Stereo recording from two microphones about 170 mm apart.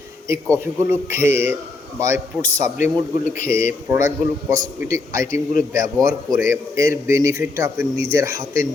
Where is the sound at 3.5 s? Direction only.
15° right (ahead or behind).